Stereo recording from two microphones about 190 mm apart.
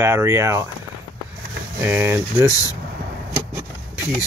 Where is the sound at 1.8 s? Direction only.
10° right (ahead or behind).